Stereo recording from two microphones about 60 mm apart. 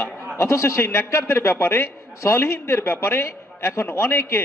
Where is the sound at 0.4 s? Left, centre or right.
Left.